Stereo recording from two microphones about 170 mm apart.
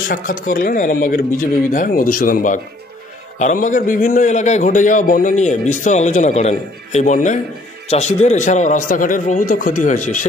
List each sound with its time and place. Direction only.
0.1 s a man's voice: 55° left (ahead or behind)